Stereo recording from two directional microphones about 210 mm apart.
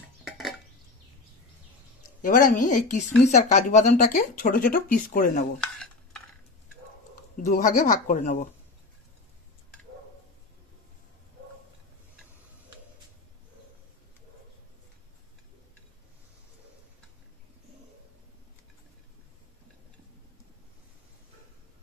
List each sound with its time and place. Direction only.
0.2 s a sound: centre (ahead or behind)
2.2 s speech: 40° left (ahead or behind)
5.6 s cutlery: 5° left (ahead or behind)
7.4 s speech: 40° left (ahead or behind)